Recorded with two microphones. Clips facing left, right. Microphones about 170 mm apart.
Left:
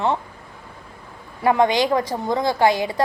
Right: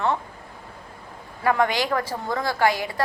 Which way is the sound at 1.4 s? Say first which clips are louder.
Left 4 dB; 20° left (ahead or behind).